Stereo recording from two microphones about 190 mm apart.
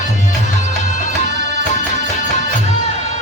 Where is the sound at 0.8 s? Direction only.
35° left (ahead or behind).